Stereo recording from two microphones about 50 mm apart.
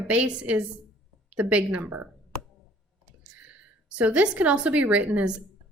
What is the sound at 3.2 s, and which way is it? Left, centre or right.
A woman's voice, right.